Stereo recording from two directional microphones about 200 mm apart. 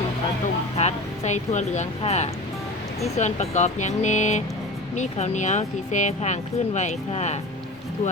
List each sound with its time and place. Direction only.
0.8 s speech: 35° left (ahead or behind)